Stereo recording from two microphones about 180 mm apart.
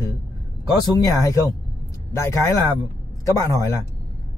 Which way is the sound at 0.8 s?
20° left (ahead or behind).